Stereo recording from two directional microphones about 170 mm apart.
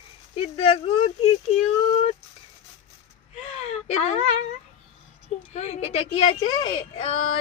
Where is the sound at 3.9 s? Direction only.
40° left (ahead or behind).